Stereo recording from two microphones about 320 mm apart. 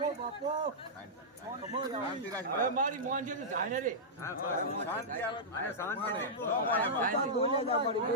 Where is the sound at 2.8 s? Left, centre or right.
Right.